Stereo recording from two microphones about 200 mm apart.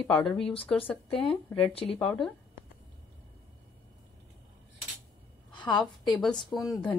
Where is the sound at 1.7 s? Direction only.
30° left (ahead or behind).